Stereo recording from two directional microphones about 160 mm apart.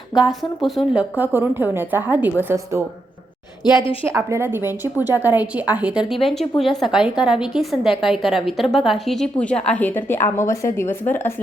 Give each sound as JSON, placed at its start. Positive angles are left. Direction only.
{"t": 0.2, "sound": "a woman's voice", "side_deg": 0}
{"t": 3.6, "sound": "a woman's voice", "side_deg": 25}
{"t": 4.0, "sound": "a woman's voice", "side_deg": -15}